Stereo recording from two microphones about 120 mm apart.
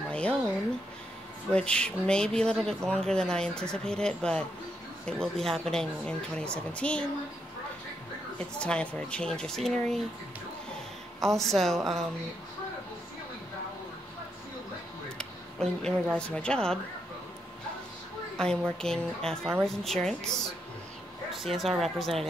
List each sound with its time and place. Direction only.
0.1 s a sound: 10° left (ahead or behind)
1.5 s speech: 10° left (ahead or behind)
8.5 s speech: 10° left (ahead or behind)
11.1 s speech: 5° left (ahead or behind)
15.1 s music: 5° left (ahead or behind)
16.2 s speech: 10° left (ahead or behind)
18.8 s speech: 5° left (ahead or behind)